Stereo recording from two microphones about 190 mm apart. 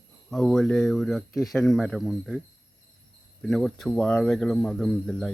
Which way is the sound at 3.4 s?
Centre (ahead or behind).